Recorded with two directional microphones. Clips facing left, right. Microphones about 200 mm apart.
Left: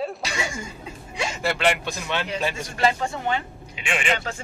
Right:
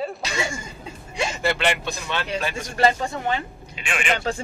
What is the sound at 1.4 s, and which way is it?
Speech, 5° left (ahead or behind).